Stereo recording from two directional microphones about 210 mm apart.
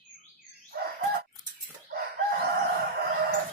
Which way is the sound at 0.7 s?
50° right (ahead or behind).